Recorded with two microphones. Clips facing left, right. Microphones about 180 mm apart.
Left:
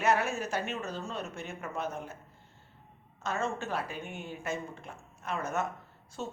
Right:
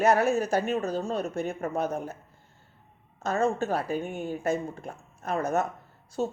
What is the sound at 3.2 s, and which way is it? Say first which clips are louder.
A woman's voice: right 8 dB; 40° right (ahead or behind).